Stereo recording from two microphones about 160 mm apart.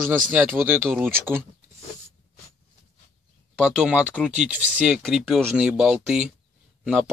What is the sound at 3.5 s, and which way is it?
Speech, 5° right (ahead or behind).